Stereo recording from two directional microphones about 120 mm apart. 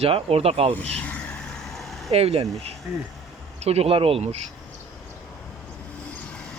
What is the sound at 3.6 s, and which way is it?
Speech, 60° right (ahead or behind).